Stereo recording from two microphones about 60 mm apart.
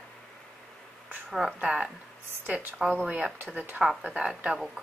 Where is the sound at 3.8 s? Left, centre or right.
Centre.